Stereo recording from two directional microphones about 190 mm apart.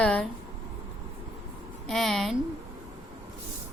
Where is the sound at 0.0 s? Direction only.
5° left (ahead or behind).